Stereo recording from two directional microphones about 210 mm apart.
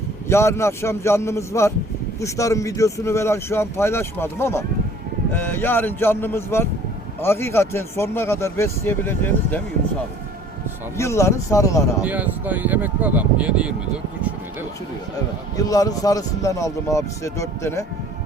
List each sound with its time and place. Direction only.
0.3 s speech: 15° left (ahead or behind)
10.9 s speech: 15° left (ahead or behind)
12.0 s speech: 5° right (ahead or behind)
15.5 s speech: 15° left (ahead or behind)